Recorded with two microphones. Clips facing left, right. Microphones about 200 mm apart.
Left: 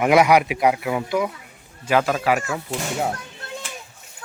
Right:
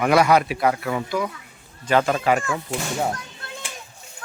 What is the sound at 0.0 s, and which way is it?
Speech, 20° left (ahead or behind).